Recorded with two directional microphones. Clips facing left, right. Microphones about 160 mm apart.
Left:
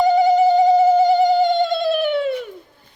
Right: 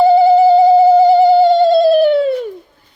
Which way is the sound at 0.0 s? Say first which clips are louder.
Right 6 dB; 35° right (ahead or behind).